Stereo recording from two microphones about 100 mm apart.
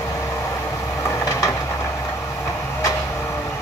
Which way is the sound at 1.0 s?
30° left (ahead or behind).